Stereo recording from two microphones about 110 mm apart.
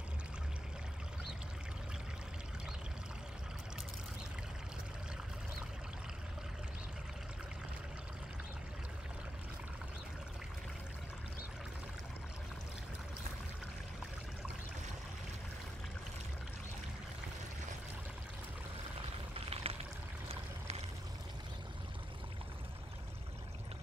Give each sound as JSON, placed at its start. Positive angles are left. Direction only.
{"t": 19.3, "sound": "pour", "side_deg": -65}